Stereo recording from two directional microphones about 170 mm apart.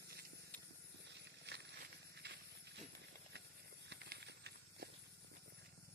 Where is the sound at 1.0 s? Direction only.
90° right.